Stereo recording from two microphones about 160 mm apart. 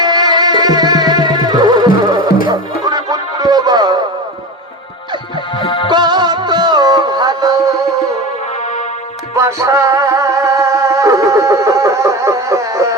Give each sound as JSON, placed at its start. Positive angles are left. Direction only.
{"t": 0.0, "sound": "music", "side_deg": -25}
{"t": 5.5, "sound": "music", "side_deg": 30}
{"t": 5.9, "sound": "music", "side_deg": -25}
{"t": 9.3, "sound": "music", "side_deg": -20}